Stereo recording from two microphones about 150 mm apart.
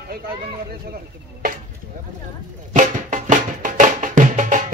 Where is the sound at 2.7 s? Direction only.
60° right (ahead or behind).